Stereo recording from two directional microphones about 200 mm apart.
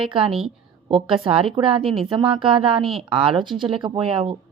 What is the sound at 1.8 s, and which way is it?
Speech, centre (ahead or behind).